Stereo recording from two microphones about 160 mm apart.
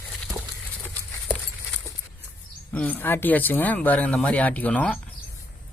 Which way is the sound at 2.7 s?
10° left (ahead or behind).